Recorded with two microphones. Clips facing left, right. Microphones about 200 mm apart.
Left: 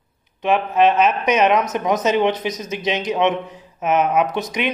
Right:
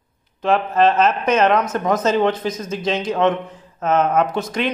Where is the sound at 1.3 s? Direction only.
15° left (ahead or behind).